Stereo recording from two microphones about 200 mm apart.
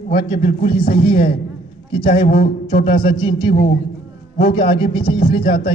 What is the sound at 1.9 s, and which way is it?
Speech, 25° left (ahead or behind).